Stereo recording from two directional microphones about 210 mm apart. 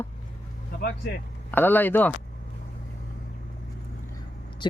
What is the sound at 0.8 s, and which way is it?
Speech, 50° left (ahead or behind).